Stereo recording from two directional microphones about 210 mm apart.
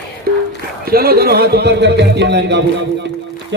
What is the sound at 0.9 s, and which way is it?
A man's voice, 45° right (ahead or behind).